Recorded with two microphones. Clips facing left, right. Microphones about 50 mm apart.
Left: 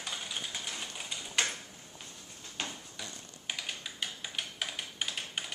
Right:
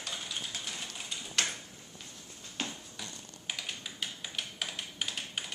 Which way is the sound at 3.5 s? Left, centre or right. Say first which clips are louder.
Left 1 dB; centre.